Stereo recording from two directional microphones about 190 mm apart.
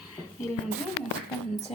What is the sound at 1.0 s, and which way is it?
Speech, 80° left.